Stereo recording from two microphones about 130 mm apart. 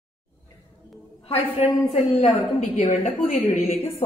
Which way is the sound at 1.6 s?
55° left (ahead or behind).